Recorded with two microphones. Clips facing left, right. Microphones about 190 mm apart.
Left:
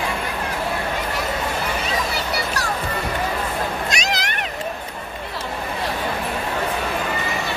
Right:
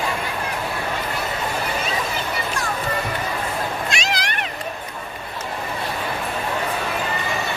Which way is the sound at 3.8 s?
40° left (ahead or behind).